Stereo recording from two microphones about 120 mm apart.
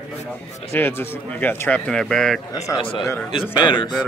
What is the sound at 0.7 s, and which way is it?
Speech, 20° left (ahead or behind).